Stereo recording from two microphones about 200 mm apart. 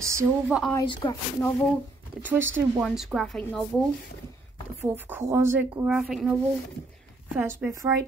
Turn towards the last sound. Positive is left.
turn(degrees=-15)  # may be behind; listen again after turning